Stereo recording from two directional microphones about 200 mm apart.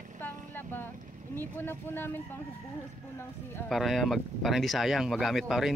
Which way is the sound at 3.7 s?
Centre (ahead or behind).